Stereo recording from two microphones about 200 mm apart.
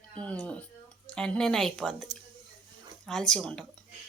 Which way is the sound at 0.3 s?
5° left (ahead or behind).